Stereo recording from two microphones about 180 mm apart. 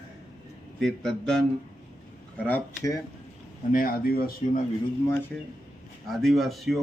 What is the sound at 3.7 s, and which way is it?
Speech, 55° left (ahead or behind).